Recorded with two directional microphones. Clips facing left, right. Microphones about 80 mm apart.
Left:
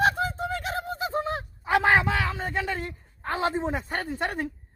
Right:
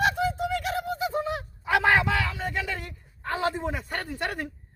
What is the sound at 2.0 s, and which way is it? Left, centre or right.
A man's voice, left.